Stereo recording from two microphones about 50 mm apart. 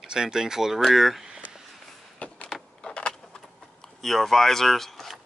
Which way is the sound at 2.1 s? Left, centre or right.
Left.